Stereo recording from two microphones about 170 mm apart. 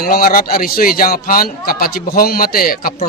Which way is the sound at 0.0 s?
60° left (ahead or behind).